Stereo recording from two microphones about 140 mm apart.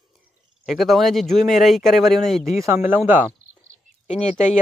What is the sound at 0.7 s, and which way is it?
Speech, centre (ahead or behind).